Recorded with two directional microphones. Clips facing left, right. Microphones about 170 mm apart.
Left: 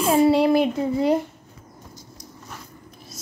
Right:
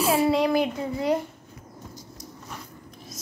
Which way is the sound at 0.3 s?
30° left (ahead or behind).